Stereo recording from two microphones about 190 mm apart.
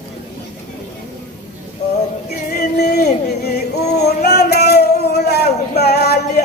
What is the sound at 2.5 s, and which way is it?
Music, 55° left (ahead or behind).